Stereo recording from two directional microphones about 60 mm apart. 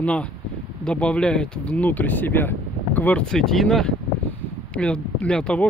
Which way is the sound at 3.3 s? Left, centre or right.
Centre.